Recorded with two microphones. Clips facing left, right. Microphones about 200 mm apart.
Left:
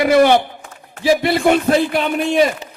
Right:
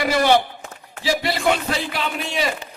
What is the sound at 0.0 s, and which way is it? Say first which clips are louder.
A man's voice: left 6 dB; 55° left (ahead or behind).